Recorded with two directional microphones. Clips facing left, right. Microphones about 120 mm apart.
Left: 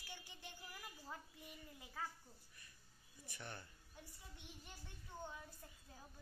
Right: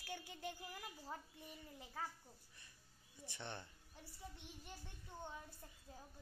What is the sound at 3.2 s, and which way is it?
Speech, 25° right (ahead or behind).